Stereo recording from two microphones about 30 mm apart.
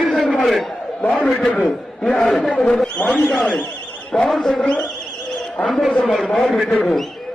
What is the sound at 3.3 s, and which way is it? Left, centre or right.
Speech, left.